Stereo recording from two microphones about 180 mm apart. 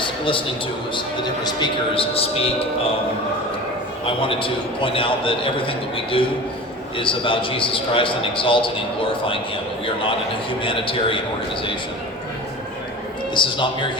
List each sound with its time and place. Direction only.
0.0 s a sound: 30° left (ahead or behind)
0.9 s a man's voice: 25° left (ahead or behind)
4.0 s a man's voice: 30° left (ahead or behind)
10.6 s a man's voice: 30° left (ahead or behind)
13.3 s a man's voice: 25° left (ahead or behind)